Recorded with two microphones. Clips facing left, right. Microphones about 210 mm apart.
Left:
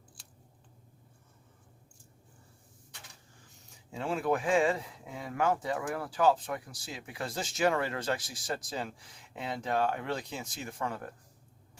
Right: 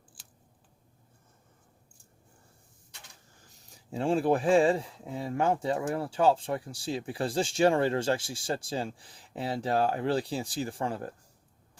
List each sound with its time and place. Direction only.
3.6 s speech: 35° right (ahead or behind)